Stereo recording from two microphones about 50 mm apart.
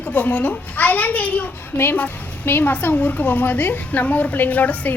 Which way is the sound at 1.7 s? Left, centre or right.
Left.